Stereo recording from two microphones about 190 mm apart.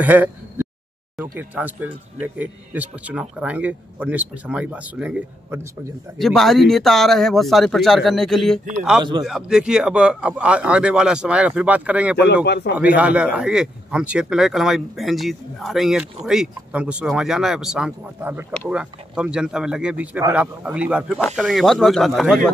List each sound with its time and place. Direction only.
0.0 s a sound: 10° right (ahead or behind)
1.1 s speech: 10° right (ahead or behind)
6.1 s speech: centre (ahead or behind)
12.4 s speech: 60° left (ahead or behind)
12.7 s speech: 5° right (ahead or behind)